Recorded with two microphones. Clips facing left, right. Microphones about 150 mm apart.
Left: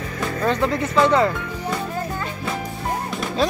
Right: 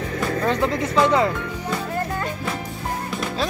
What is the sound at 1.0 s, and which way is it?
Speech, 15° right (ahead or behind).